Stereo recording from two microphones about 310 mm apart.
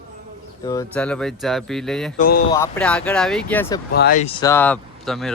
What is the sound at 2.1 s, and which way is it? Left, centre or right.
Speech, left.